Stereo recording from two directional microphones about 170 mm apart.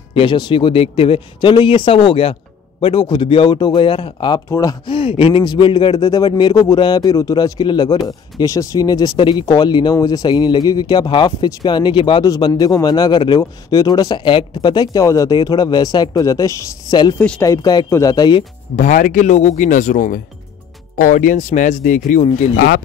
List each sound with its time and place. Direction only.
0.1 s speech: 30° left (ahead or behind)
17.2 s speech: 10° left (ahead or behind)
17.5 s speech: 25° left (ahead or behind)
18.8 s speech: 50° left (ahead or behind)